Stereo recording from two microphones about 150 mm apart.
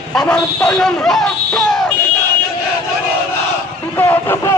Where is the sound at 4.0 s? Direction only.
15° left (ahead or behind).